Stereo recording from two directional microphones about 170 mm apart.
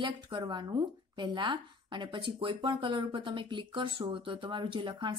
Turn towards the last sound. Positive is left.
turn(degrees=-30)  # may be behind; listen again after turning